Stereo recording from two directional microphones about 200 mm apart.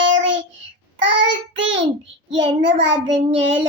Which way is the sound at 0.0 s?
70° right (ahead or behind).